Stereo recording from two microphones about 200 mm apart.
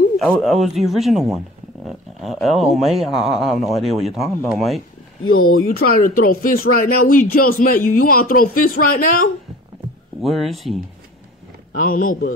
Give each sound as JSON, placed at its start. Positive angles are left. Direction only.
{"t": 0.2, "sound": "speech", "side_deg": 0}
{"t": 5.3, "sound": "speech", "side_deg": 90}
{"t": 5.7, "sound": "speech", "side_deg": 45}
{"t": 10.2, "sound": "speech", "side_deg": 0}
{"t": 11.7, "sound": "speech", "side_deg": 40}